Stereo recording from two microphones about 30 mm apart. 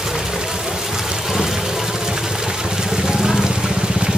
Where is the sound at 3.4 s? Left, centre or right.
Right.